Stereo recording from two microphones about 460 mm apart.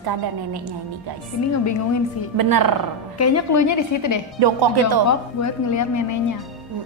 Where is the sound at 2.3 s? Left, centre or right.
Right.